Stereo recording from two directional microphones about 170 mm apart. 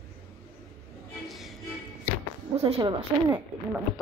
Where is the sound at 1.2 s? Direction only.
Centre (ahead or behind).